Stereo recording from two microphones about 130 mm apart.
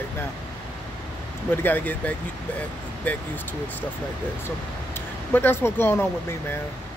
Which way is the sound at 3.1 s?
10° left (ahead or behind).